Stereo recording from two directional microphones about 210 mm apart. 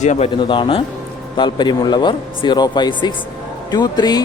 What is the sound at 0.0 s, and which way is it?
Speech, 35° left (ahead or behind).